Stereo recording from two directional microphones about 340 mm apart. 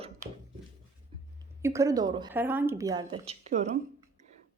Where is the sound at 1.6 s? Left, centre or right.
Centre.